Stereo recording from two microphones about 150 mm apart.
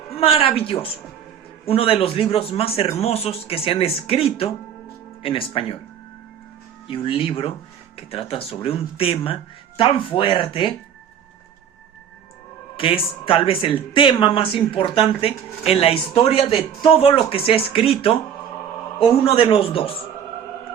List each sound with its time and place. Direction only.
0.1 s speech: 40° left (ahead or behind)
6.8 s speech: 35° left (ahead or behind)
12.7 s speech: 35° left (ahead or behind)